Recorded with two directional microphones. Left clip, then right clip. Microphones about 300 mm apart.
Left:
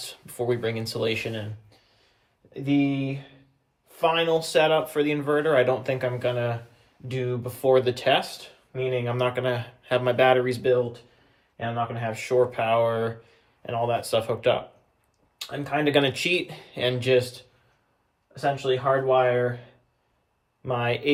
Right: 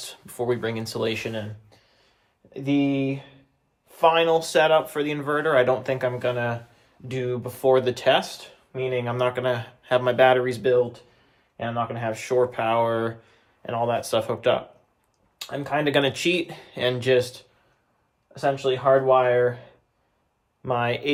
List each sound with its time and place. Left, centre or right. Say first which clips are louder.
0.0 s speech: right 1 dB; centre
2.5 s speech: right 1 dB; centre